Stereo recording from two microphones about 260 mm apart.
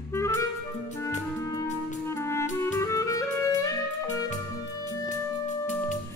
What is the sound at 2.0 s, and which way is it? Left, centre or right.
Music, centre.